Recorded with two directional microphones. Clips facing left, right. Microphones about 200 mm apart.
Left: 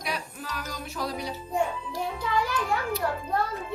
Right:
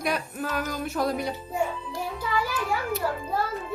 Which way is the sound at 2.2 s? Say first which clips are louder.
Even; 5° right (ahead or behind).